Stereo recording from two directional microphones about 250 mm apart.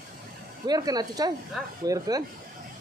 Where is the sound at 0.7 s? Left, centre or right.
Centre.